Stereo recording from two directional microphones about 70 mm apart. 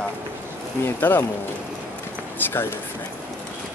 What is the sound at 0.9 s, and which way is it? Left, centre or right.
Speech, left.